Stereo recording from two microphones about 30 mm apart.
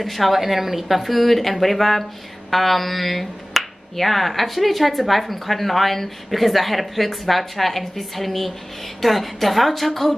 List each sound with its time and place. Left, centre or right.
0.0 s speech: centre